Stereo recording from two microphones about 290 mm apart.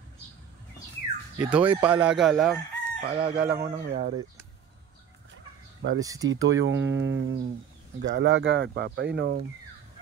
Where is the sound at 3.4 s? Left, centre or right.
Right.